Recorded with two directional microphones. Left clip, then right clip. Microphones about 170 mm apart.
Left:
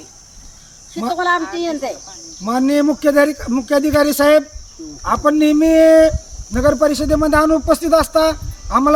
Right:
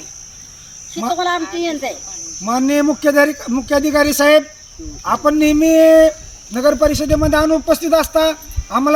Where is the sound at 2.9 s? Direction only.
Centre (ahead or behind).